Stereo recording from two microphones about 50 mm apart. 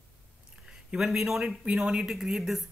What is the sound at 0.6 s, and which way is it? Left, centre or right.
Speech, centre.